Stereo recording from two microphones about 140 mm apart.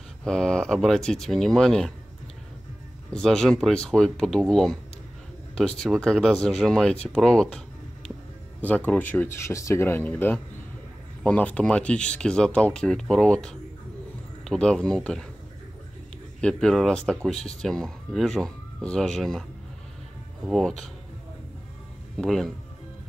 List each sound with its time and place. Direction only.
0.2 s speech: 5° left (ahead or behind)
3.1 s speech: 5° left (ahead or behind)
8.5 s speech: 10° left (ahead or behind)
16.3 s speech: 5° left (ahead or behind)
20.4 s speech: centre (ahead or behind)
22.1 s speech: 5° left (ahead or behind)